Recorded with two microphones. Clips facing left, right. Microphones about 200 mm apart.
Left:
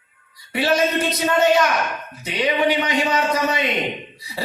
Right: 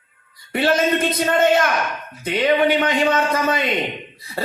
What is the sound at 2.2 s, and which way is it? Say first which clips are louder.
A man's voice: right 3 dB; 50° right (ahead or behind).